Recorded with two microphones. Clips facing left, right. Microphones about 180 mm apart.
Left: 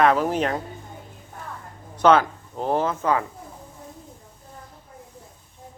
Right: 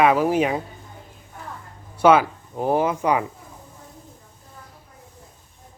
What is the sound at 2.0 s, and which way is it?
Speech, 10° right (ahead or behind).